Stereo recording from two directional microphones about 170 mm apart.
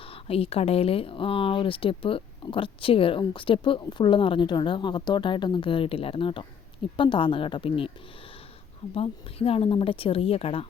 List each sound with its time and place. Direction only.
0.1 s a woman's voice: 35° left (ahead or behind)
9.0 s speech: 35° left (ahead or behind)